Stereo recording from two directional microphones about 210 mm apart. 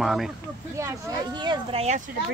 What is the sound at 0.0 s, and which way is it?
Speech, centre (ahead or behind).